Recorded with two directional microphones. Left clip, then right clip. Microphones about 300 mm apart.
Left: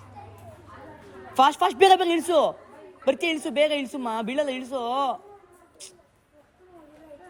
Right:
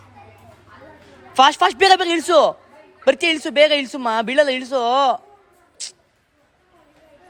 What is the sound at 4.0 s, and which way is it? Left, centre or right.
A man's voice, centre.